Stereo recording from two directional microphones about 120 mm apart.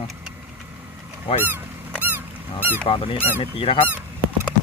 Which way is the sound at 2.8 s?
45° left (ahead or behind).